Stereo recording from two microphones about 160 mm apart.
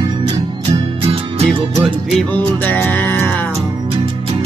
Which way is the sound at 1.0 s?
40° right (ahead or behind).